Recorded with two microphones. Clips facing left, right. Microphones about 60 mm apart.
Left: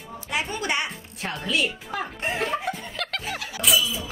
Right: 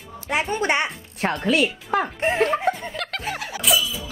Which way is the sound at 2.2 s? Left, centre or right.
Right.